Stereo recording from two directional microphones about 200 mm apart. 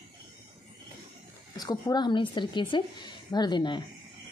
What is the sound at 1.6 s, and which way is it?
A woman's voice, 20° left (ahead or behind).